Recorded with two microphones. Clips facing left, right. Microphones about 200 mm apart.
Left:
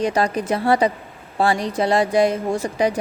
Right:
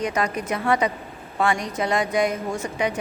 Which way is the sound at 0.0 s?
30° left (ahead or behind).